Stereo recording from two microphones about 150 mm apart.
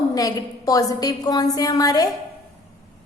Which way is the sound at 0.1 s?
25° left (ahead or behind).